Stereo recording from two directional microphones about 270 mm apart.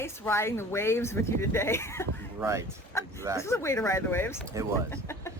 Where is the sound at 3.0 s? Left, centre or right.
Centre.